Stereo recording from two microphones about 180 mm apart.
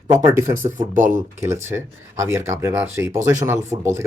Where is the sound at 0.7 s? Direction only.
45° right (ahead or behind).